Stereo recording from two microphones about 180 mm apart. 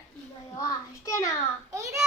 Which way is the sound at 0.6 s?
20° left (ahead or behind).